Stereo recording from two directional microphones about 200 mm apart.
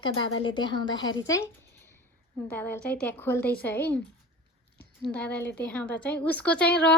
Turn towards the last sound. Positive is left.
turn(degrees=5)  # may be behind; listen again after turning